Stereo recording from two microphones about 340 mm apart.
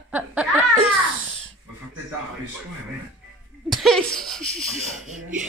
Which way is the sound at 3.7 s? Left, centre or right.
Centre.